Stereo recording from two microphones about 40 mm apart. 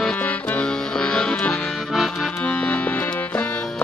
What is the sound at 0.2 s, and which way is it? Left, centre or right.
Accordion, left.